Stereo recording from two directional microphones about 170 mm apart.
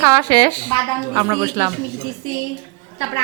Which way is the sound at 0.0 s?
25° right (ahead or behind).